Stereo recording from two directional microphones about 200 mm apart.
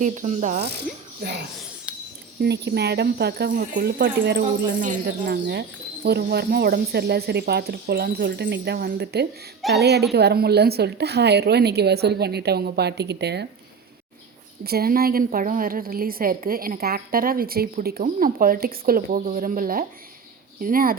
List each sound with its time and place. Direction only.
0.0 s speech: 35° right (ahead or behind)
1.2 s a woman's voice: 55° right (ahead or behind)
1.9 s cutlery: 5° right (ahead or behind)
2.4 s a woman's voice: 55° right (ahead or behind)
4.6 s speech: 40° right (ahead or behind)
5.2 s a woman's voice: 55° right (ahead or behind)
14.6 s a woman's voice: 50° right (ahead or behind)